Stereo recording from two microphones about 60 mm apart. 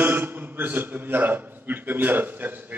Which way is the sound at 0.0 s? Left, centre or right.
Right.